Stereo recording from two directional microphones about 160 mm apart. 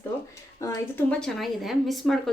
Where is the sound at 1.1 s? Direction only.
5° left (ahead or behind).